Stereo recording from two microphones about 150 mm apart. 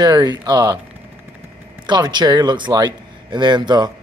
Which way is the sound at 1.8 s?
30° right (ahead or behind).